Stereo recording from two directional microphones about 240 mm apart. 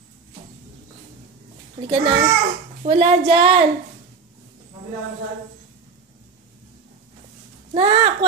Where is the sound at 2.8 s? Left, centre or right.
Right.